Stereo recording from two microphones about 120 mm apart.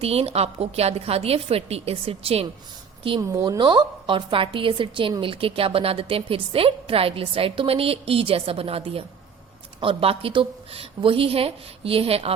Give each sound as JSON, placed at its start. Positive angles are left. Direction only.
{"t": 0.0, "sound": "a woman's voice", "side_deg": -55}
{"t": 3.2, "sound": "speech", "side_deg": -25}
{"t": 3.6, "sound": "a woman's voice", "side_deg": -40}